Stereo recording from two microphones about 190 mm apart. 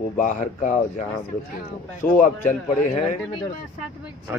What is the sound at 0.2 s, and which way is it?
Speech, 40° left (ahead or behind).